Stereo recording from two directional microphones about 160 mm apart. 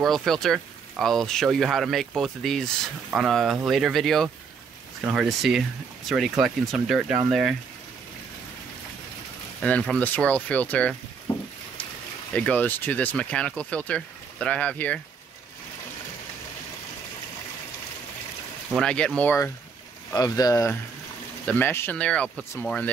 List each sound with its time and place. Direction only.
0.0 s speech: centre (ahead or behind)
9.6 s speech: 5° left (ahead or behind)
12.4 s speech: 10° left (ahead or behind)
18.7 s speech: 5° left (ahead or behind)